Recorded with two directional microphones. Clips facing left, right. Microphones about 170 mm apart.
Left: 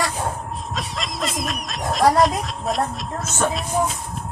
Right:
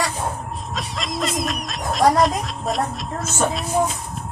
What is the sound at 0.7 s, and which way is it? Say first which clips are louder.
Speech: right 2 dB; centre (ahead or behind).